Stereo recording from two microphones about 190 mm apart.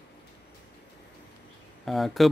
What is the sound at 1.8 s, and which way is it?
Speech, centre (ahead or behind).